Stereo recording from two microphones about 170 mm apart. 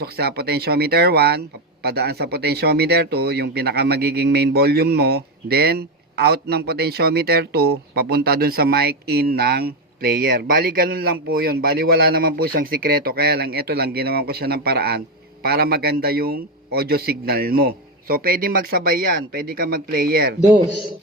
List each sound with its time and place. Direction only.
0.0 s a man's voice: 65° right (ahead or behind)